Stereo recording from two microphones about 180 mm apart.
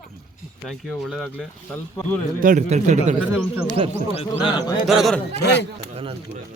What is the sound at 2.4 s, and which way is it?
Speech, 45° right (ahead or behind).